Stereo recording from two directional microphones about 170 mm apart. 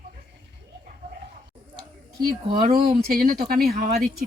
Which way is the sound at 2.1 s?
60° right (ahead or behind).